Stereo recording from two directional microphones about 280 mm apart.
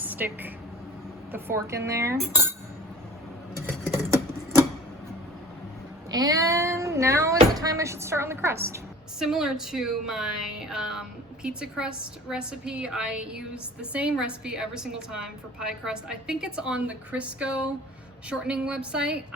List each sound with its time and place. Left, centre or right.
0.0 s a woman's voice: centre
2.2 s speech: right
3.7 s a sound: centre
6.1 s a woman's voice: centre